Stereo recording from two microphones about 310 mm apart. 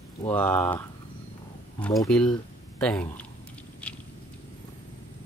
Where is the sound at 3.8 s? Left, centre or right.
Centre.